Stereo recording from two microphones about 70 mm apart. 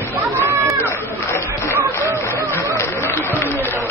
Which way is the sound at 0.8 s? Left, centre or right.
Left.